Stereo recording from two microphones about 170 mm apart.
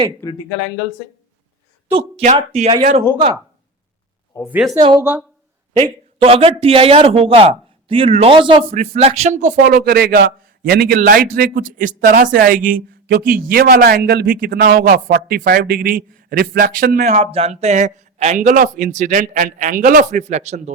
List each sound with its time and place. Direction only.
0.2 s speech: 15° left (ahead or behind)
1.9 s a man's voice: 35° right (ahead or behind)
4.4 s speech: 10° right (ahead or behind)
4.8 s a man's voice: 30° right (ahead or behind)
8.7 s a man's voice: 40° right (ahead or behind)
9.7 s a man's voice: 65° right (ahead or behind)
17.1 s speech: 35° right (ahead or behind)